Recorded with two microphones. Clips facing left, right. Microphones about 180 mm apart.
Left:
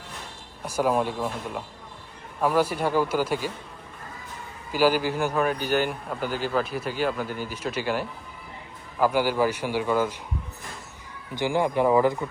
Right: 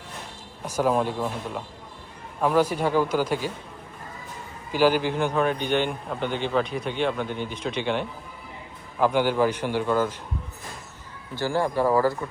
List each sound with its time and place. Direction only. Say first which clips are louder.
0.6 s a man's voice: right 1 dB; 10° left (ahead or behind)
4.7 s a man's voice: right 1 dB; 5° left (ahead or behind)
11.3 s a man's voice: left 1 dB; 15° left (ahead or behind)